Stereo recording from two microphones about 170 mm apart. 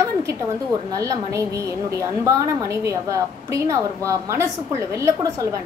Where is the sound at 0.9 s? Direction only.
20° right (ahead or behind).